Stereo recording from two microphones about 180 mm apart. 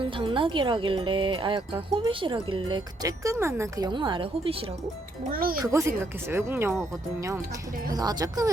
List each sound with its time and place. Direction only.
0.0 s speech: 30° right (ahead or behind)
5.3 s speech: 55° right (ahead or behind)
5.6 s speech: 15° right (ahead or behind)